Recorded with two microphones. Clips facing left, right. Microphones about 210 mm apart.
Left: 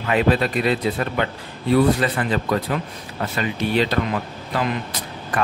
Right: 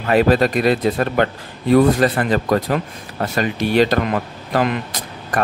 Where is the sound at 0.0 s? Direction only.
45° right (ahead or behind).